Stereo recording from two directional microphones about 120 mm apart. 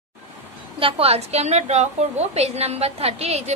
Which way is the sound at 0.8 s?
50° right (ahead or behind).